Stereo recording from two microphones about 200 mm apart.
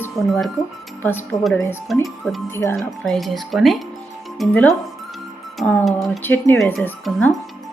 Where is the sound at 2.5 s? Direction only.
10° left (ahead or behind).